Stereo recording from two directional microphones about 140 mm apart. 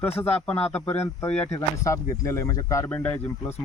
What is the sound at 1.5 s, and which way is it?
A man's voice, 20° left (ahead or behind).